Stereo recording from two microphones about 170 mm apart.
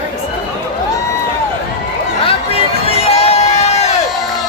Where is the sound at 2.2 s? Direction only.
35° left (ahead or behind).